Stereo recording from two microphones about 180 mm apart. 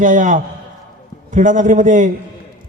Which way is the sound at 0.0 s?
45° right (ahead or behind).